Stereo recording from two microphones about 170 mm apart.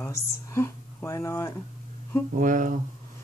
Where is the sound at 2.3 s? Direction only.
50° right (ahead or behind).